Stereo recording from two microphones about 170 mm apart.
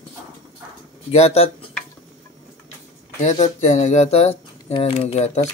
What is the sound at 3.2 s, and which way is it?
Speech, 45° left (ahead or behind).